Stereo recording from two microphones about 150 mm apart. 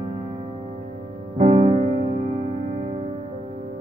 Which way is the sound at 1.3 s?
50° right (ahead or behind).